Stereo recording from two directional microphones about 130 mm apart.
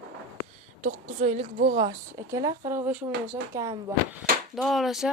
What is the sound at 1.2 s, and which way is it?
Speech, 60° right (ahead or behind).